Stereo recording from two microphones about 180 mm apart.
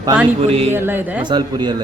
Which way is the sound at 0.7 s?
10° right (ahead or behind).